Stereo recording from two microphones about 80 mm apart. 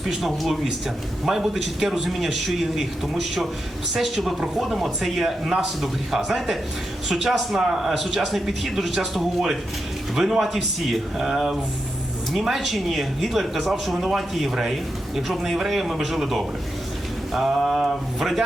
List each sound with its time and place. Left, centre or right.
0.0 s speech: centre
3.9 s speech: centre